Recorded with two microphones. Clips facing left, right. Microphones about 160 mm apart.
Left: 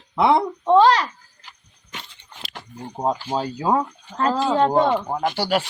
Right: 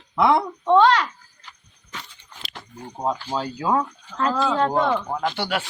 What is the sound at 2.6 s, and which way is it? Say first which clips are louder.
Speech: left 3 dB; 20° left (ahead or behind).